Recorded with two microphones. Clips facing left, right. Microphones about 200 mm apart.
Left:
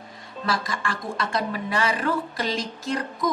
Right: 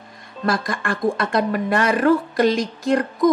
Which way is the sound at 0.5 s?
55° right (ahead or behind).